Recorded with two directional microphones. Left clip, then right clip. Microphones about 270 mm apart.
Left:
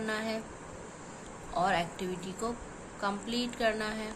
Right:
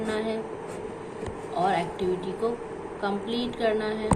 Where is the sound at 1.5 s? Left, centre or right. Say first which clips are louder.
Right 4 dB; left.